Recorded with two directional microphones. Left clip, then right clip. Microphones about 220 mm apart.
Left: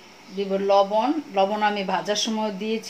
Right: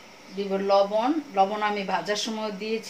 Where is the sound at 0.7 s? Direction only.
20° left (ahead or behind).